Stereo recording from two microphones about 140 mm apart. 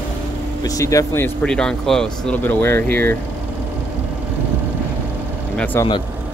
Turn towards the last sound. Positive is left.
turn(degrees=10)  # may be behind; listen again after turning